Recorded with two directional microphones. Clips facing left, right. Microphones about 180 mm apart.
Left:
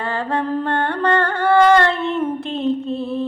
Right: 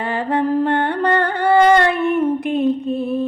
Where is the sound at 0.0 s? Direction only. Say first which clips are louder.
Right 3 dB; 20° right (ahead or behind).